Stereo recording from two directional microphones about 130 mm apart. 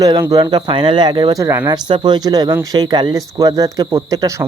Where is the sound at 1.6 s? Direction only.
35° right (ahead or behind).